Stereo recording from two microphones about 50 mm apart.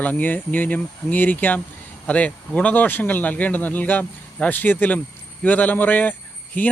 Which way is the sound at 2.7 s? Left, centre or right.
Left.